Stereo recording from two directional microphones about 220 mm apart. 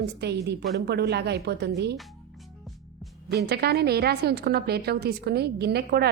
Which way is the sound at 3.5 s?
45° right (ahead or behind).